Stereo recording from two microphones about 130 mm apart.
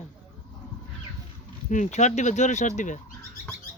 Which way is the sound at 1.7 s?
70° left (ahead or behind).